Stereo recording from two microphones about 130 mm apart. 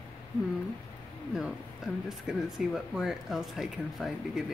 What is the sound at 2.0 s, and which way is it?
Speech, centre (ahead or behind).